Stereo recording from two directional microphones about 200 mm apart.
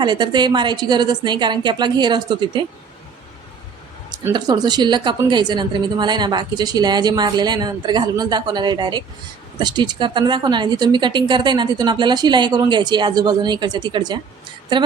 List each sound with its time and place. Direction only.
0.0 s a woman's voice: 20° right (ahead or behind)
4.1 s a woman's voice: 20° right (ahead or behind)